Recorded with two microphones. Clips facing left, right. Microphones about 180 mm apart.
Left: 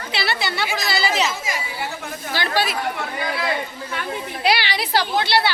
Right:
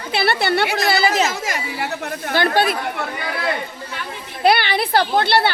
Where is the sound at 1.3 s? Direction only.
70° right (ahead or behind); by 2.7 s 55° right (ahead or behind).